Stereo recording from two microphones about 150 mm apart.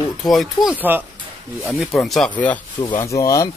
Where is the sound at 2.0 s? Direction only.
Centre (ahead or behind).